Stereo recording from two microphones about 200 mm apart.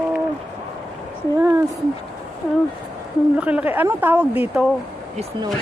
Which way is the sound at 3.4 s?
5° right (ahead or behind).